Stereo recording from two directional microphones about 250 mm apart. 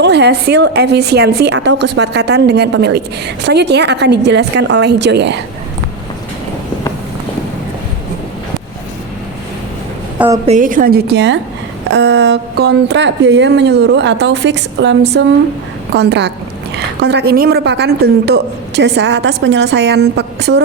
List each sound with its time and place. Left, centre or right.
0.0 s a woman's voice: right
10.2 s a woman's voice: centre
10.4 s a woman's voice: right